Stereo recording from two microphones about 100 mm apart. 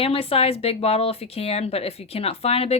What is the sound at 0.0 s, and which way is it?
A woman's voice, 75° left (ahead or behind).